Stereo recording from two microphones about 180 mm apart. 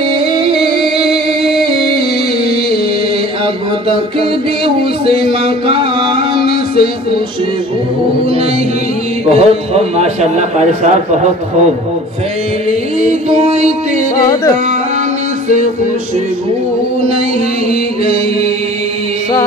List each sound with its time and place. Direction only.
5.0 s music: 30° right (ahead or behind)
9.3 s a man's voice: 35° right (ahead or behind)
13.0 s a man's voice: 35° right (ahead or behind)
14.2 s music: 20° left (ahead or behind)